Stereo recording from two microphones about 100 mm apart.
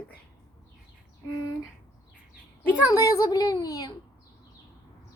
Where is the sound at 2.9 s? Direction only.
35° left (ahead or behind).